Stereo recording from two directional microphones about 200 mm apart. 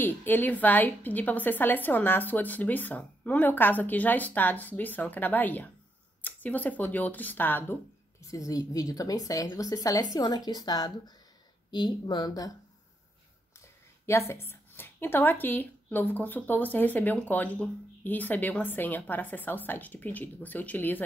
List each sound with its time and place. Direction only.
0.0 s a woman's voice: 10° left (ahead or behind)
14.0 s a woman's voice: 15° left (ahead or behind)